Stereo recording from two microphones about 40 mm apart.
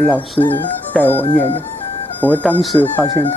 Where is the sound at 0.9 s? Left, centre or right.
Left.